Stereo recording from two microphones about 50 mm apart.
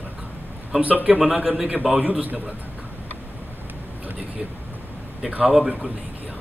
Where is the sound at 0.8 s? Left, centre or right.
Right.